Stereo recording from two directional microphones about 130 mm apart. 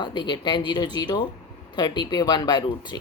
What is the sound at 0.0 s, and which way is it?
Speech, 35° left (ahead or behind).